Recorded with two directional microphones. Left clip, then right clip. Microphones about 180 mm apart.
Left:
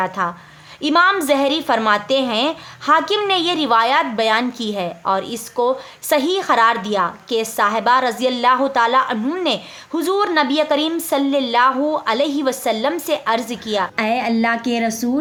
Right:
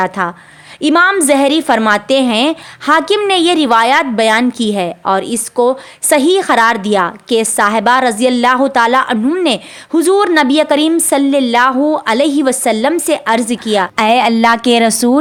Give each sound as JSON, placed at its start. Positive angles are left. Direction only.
{"t": 0.0, "sound": "a woman's voice", "side_deg": -35}
{"t": 13.9, "sound": "a woman's voice", "side_deg": -55}